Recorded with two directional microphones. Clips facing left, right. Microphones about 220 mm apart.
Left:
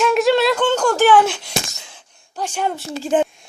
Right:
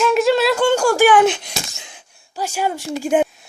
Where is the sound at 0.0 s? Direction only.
Centre (ahead or behind).